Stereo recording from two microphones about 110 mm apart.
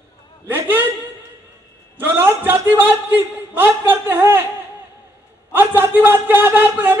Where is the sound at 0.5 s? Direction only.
20° right (ahead or behind).